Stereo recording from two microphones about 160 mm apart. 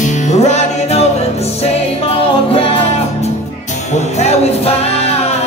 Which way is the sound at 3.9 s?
45° left (ahead or behind).